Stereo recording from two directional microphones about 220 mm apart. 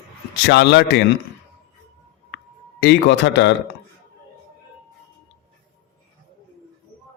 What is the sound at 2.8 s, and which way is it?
Speech, 50° left (ahead or behind).